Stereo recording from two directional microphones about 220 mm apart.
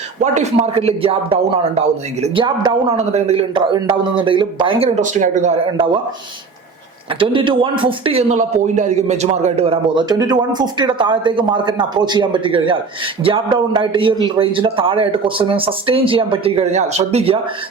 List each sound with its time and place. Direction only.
0.2 s a man's voice: 30° right (ahead or behind)
7.2 s a man's voice: 25° right (ahead or behind)